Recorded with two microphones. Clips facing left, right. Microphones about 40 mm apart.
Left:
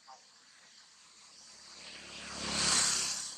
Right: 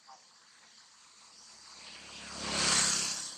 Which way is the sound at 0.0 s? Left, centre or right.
Centre.